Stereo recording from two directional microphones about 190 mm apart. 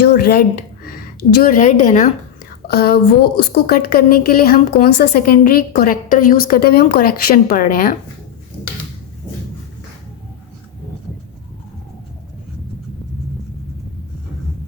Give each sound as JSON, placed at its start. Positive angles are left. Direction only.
{"t": 0.0, "sound": "a sound", "side_deg": 55}
{"t": 0.9, "sound": "speech", "side_deg": 50}
{"t": 2.6, "sound": "a woman's voice", "side_deg": 55}